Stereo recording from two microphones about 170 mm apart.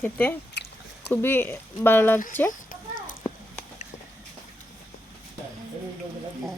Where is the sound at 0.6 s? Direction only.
90° left.